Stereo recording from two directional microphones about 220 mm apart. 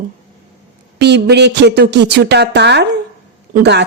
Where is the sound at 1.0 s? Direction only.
50° right (ahead or behind).